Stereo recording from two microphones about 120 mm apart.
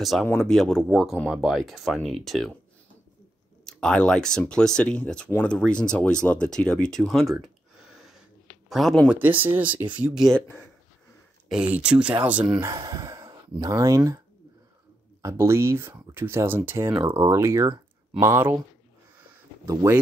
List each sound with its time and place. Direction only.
0.0 s speech: centre (ahead or behind)
3.6 s speech: 5° left (ahead or behind)
8.6 s speech: centre (ahead or behind)
11.4 s speech: 5° right (ahead or behind)
12.8 s speech: 30° right (ahead or behind)
15.2 s speech: 20° right (ahead or behind)
19.6 s speech: 25° right (ahead or behind)